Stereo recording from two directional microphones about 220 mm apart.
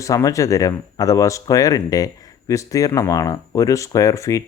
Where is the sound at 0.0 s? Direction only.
15° left (ahead or behind).